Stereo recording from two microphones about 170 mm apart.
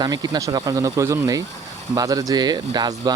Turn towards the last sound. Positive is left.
turn(degrees=-25)  # may be behind; listen again after turning